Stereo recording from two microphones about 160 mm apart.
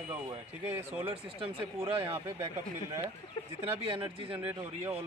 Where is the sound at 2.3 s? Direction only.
15° right (ahead or behind).